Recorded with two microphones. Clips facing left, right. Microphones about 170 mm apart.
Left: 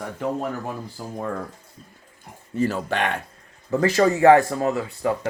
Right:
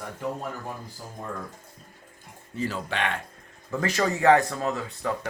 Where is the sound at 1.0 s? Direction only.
85° left.